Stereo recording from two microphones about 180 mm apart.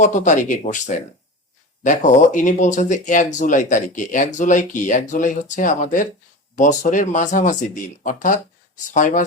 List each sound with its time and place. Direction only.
0.0 s speech: 45° left (ahead or behind)